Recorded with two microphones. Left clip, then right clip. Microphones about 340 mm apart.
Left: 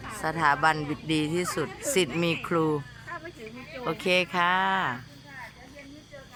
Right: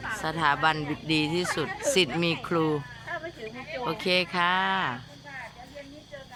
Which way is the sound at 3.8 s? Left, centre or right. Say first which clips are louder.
Left 1 dB; centre.